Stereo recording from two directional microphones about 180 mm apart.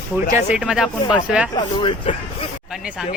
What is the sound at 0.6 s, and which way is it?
Speech, 5° right (ahead or behind).